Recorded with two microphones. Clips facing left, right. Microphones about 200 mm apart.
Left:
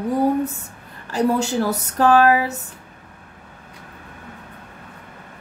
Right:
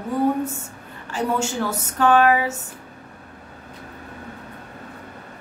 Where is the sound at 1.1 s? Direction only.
35° left (ahead or behind).